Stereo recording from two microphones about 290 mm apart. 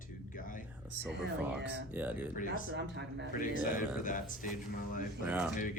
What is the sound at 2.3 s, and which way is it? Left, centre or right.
Speech, left.